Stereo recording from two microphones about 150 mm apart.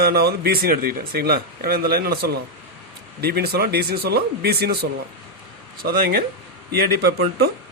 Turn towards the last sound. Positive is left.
turn(degrees=-90)